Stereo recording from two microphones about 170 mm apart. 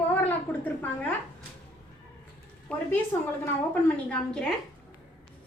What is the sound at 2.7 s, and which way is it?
A woman's voice, 5° left (ahead or behind).